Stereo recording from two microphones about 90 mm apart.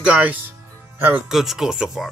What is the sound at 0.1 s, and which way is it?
Music, 15° right (ahead or behind).